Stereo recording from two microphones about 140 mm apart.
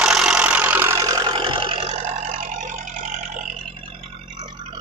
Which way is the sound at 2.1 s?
65° right (ahead or behind).